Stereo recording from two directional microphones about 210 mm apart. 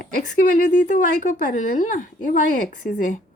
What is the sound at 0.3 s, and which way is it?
Speech, 40° left (ahead or behind).